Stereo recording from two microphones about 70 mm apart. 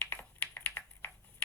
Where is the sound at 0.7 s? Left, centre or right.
Left.